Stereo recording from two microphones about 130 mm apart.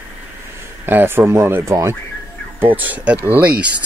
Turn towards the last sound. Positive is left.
turn(degrees=-10)  # may be behind; listen again after turning